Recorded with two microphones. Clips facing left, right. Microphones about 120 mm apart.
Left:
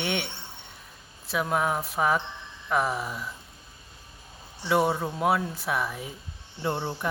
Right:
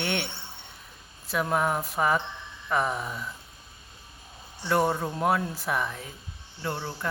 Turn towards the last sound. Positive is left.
turn(degrees=15)  # may be behind; listen again after turning